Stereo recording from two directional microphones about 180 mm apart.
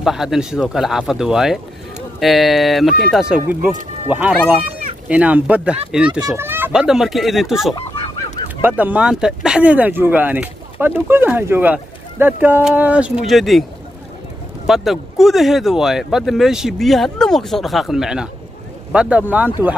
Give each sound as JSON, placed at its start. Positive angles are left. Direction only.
{"t": 0.0, "sound": "speech", "side_deg": 0}
{"t": 7.7, "sound": "fowl", "side_deg": 30}
{"t": 8.6, "sound": "speech", "side_deg": -10}
{"t": 14.7, "sound": "speech", "side_deg": 0}